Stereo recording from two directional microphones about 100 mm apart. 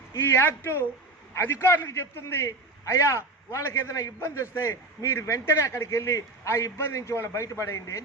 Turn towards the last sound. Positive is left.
turn(degrees=30)  # may be behind; listen again after turning